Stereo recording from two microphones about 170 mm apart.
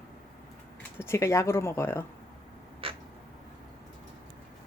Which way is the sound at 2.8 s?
35° right (ahead or behind).